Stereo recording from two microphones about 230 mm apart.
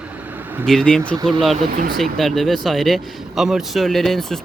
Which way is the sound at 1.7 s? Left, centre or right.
Right.